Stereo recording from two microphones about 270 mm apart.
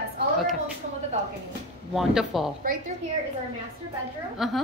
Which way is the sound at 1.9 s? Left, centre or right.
Centre.